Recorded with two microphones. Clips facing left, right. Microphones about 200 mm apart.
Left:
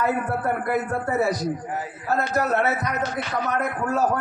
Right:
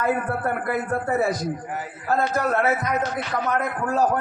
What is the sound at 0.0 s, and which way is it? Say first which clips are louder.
A man's voice: even; 50° right (ahead or behind).